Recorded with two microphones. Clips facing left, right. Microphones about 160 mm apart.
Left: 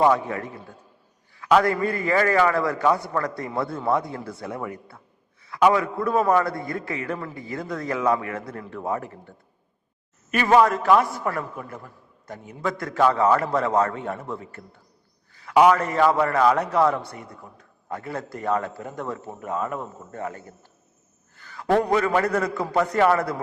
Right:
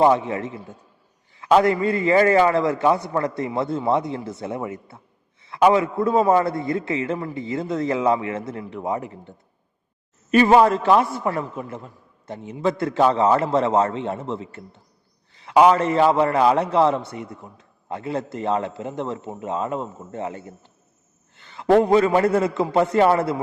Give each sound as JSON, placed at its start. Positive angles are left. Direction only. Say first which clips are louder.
{"t": 0.0, "sound": "a man's voice", "louder": "right 2 dB", "side_deg": -25}
{"t": 10.3, "sound": "a man's voice", "louder": "right 4 dB", "side_deg": -30}